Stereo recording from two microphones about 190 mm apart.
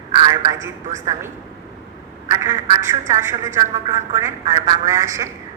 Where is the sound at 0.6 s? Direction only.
15° right (ahead or behind).